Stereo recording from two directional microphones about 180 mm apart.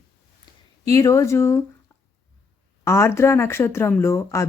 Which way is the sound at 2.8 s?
15° left (ahead or behind).